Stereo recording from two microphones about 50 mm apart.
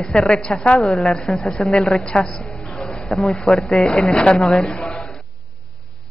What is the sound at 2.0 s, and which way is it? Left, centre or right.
Speech, left.